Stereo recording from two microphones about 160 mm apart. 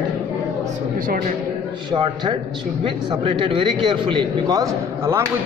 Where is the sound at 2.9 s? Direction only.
30° right (ahead or behind).